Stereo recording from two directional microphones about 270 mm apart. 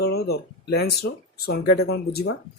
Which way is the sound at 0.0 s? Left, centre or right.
Left.